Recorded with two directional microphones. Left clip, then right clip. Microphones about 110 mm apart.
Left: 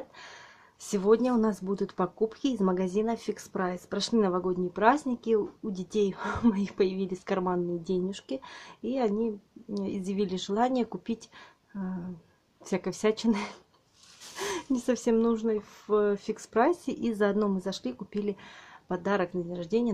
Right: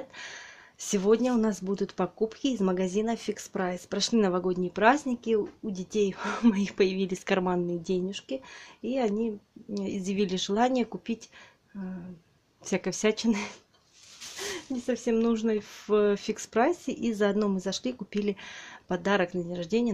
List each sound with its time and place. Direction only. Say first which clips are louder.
0.2 s speech: right 5 dB; 10° right (ahead or behind)
5.2 s speech: even; 5° left (ahead or behind); by 7.6 s 20° right (ahead or behind)
8.1 s speech: right 1 dB; 5° left (ahead or behind)
12.6 s speech: right 1 dB; 10° right (ahead or behind)
14.5 s speech: left 3 dB; 35° left (ahead or behind)
15.4 s speech: right 1 dB; 15° right (ahead or behind)